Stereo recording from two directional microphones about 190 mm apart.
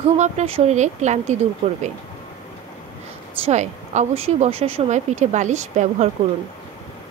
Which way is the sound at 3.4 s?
35° right (ahead or behind).